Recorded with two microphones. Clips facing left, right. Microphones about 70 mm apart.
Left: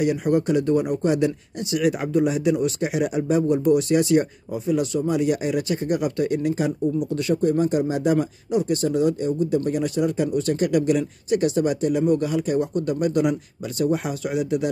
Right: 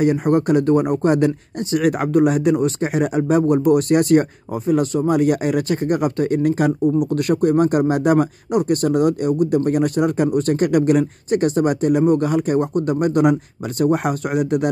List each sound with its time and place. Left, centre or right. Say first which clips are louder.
0.0 s speech: right 4 dB; right